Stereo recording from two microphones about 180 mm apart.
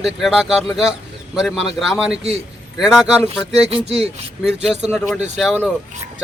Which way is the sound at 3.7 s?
35° right (ahead or behind).